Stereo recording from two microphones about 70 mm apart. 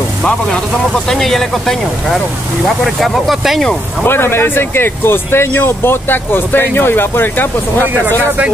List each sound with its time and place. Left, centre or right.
1.0 s speech: centre
4.0 s speech: left